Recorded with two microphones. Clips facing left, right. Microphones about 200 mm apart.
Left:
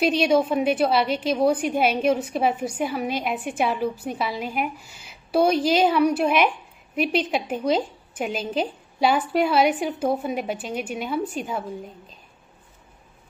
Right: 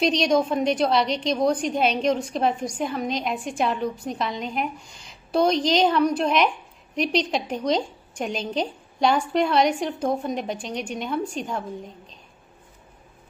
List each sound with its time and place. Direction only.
0.0 s a woman's voice: 5° left (ahead or behind)